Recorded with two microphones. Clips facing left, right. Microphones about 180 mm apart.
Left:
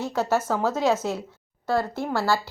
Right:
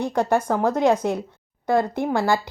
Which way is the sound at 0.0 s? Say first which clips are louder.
Right 3 dB; 15° right (ahead or behind).